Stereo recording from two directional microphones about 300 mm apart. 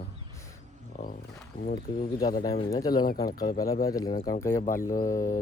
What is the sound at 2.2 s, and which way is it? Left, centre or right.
Speech, centre.